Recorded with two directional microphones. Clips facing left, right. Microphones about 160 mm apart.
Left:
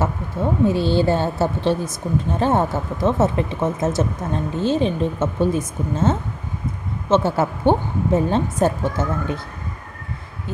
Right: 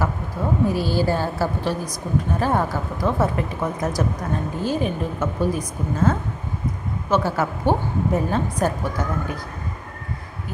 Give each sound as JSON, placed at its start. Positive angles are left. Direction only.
{"t": 0.7, "sound": "a woman's voice", "side_deg": 25}